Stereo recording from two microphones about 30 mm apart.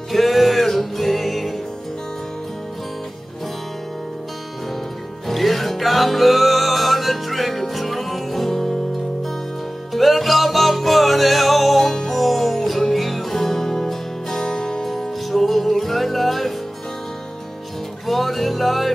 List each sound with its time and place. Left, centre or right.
0.1 s music: centre
5.3 s music: centre
9.9 s music: centre
14.3 s music: left
14.9 s music: centre
18.0 s music: centre